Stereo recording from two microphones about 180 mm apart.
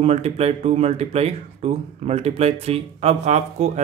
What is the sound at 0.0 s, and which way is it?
Speech, 35° right (ahead or behind).